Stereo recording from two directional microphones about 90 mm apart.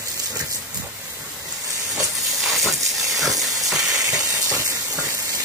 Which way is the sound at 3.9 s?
40° right (ahead or behind).